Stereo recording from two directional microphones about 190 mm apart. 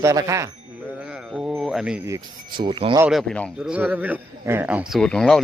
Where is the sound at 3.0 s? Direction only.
Centre (ahead or behind).